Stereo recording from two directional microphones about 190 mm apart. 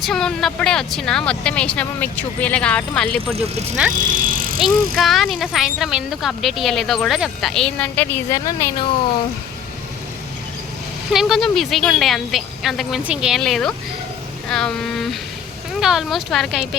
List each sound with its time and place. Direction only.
0.0 s speech: 5° left (ahead or behind)
3.9 s speech: 45° right (ahead or behind)
4.9 s speech: centre (ahead or behind); by 8.9 s 15° left (ahead or behind)
11.1 s speech: centre (ahead or behind)